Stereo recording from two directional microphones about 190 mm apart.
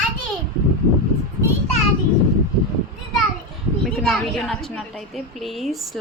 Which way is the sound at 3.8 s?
Centre (ahead or behind).